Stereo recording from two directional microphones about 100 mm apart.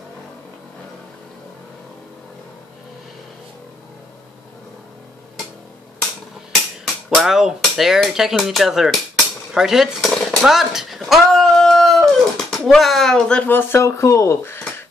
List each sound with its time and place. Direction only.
6.8 s speech: 5° right (ahead or behind)
9.5 s a sound: 5° right (ahead or behind)
13.5 s speech: 20° left (ahead or behind)